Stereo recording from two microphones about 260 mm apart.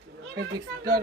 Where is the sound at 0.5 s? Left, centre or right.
Centre.